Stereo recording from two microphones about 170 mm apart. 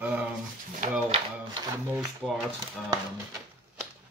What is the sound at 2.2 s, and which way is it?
Rub, 5° left (ahead or behind).